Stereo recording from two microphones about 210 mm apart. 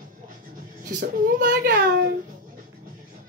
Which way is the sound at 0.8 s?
50° right (ahead or behind).